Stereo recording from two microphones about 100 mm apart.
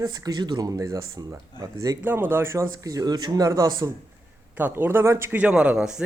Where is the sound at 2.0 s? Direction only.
20° right (ahead or behind); by 3.9 s 35° right (ahead or behind).